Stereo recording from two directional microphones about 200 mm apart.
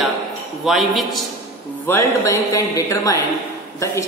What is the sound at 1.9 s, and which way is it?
A man's voice, 15° left (ahead or behind).